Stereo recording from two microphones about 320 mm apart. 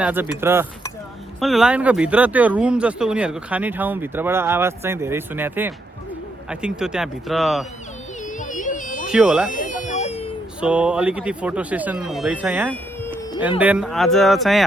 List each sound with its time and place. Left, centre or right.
0.0 s speech: centre
8.4 s a sound: left
9.0 s speech: centre
9.5 s baby cry: left
10.6 s speech: centre